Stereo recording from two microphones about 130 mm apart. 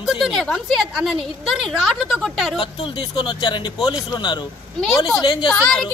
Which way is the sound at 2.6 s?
40° left (ahead or behind).